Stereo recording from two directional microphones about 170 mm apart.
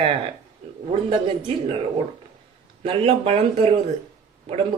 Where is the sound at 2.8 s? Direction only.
35° right (ahead or behind).